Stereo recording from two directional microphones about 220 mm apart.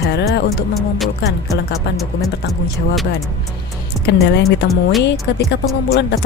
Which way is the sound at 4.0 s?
Centre (ahead or behind).